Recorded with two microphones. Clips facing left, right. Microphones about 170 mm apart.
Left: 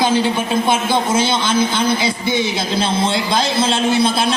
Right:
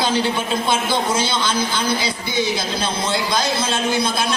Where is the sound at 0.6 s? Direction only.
55° left (ahead or behind).